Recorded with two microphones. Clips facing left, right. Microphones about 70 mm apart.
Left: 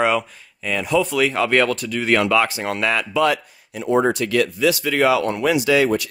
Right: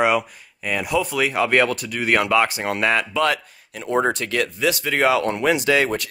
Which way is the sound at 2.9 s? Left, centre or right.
Right.